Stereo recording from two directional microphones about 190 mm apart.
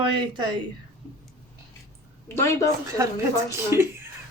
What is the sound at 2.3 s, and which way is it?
Speech, 15° left (ahead or behind).